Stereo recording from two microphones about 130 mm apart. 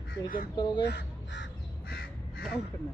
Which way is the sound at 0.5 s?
35° left (ahead or behind).